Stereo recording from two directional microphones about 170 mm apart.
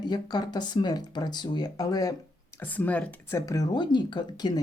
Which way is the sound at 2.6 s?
10° left (ahead or behind).